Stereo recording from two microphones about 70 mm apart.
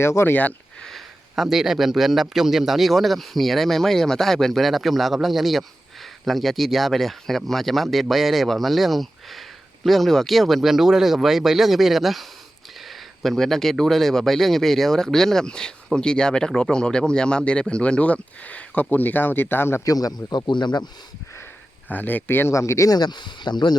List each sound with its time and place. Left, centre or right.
0.0 s speech: left
0.8 s speech: centre; by 19.8 s left
19.8 s speech: left
21.8 s speech: left
22.5 s speech: left
22.9 s speech: left